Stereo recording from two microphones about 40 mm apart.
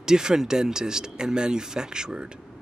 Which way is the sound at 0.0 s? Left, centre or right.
Centre.